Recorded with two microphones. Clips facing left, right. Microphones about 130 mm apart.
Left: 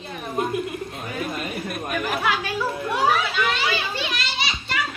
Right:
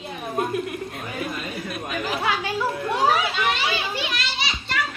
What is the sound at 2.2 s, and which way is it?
Children playing, 20° right (ahead or behind).